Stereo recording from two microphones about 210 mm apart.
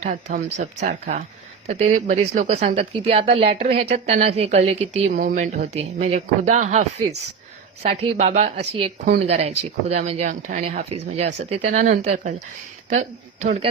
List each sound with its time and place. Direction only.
0.0 s a woman's voice: 35° right (ahead or behind)